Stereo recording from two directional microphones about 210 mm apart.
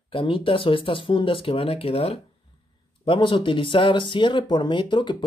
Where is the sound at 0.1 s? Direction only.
25° left (ahead or behind).